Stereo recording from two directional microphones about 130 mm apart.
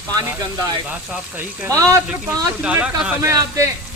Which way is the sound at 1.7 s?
25° right (ahead or behind).